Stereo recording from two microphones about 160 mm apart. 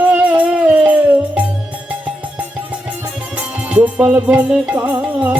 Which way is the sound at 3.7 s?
5° right (ahead or behind).